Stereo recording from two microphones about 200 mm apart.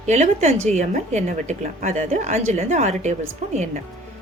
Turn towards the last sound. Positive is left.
turn(degrees=-35)  # may be behind; listen again after turning